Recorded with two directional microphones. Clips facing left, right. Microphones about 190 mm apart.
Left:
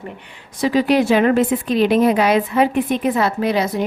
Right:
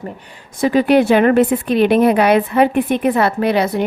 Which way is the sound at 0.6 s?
55° right (ahead or behind).